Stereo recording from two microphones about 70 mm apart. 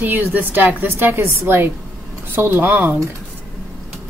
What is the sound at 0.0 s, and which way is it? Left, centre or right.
A woman's voice, right.